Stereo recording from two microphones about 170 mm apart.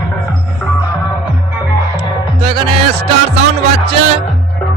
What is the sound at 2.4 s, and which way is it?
Music, 35° right (ahead or behind).